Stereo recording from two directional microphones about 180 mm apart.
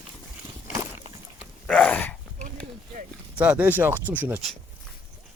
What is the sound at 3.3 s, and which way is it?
Speech, 10° right (ahead or behind).